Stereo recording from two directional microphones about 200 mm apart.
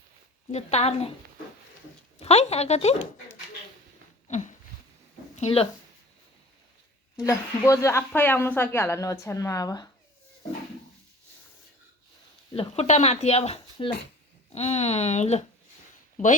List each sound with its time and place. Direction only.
0.5 s speech: 30° left (ahead or behind)
2.1 s speech: 30° left (ahead or behind)
4.3 s a sound: 35° left (ahead or behind)
5.4 s speech: 30° left (ahead or behind)
7.2 s speech: 15° left (ahead or behind)
12.5 s speech: 30° left (ahead or behind)